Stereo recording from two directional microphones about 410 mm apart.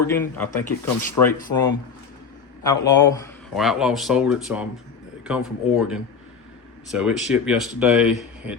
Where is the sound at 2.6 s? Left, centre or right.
Centre.